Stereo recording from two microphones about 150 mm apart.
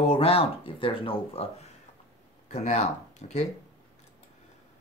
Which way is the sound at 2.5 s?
45° left (ahead or behind).